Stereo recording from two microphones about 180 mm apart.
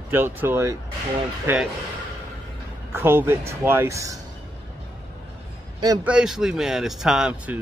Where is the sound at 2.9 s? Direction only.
10° right (ahead or behind).